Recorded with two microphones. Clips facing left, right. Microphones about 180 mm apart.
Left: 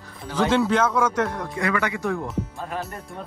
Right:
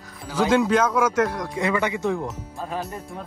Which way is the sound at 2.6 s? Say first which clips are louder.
Right 1 dB; centre (ahead or behind).